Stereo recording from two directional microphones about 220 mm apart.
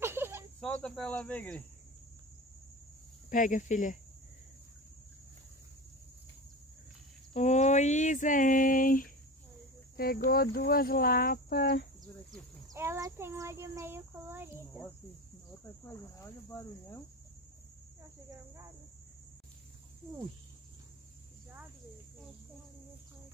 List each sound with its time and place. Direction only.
0.0 s cricket: 10° right (ahead or behind)
0.6 s speech: 5° left (ahead or behind)
3.3 s speech: 35° left (ahead or behind)
7.3 s speech: 30° left (ahead or behind)
12.7 s a child's voice: 10° right (ahead or behind)